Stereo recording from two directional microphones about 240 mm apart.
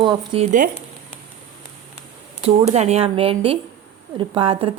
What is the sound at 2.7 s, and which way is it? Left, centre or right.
A woman's voice, right.